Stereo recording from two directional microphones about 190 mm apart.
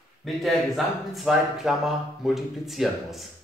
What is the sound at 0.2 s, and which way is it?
Speech, centre (ahead or behind).